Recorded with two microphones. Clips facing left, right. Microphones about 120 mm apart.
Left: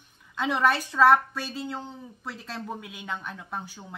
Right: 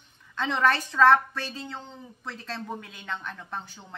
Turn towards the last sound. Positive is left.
turn(degrees=10)  # may be behind; listen again after turning